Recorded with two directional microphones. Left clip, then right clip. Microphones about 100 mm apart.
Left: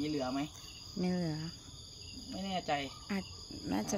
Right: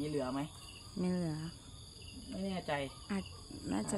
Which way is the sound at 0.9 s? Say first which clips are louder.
Left 2 dB; 20° left (ahead or behind).